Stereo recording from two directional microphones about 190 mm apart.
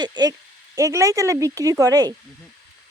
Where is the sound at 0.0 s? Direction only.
20° right (ahead or behind).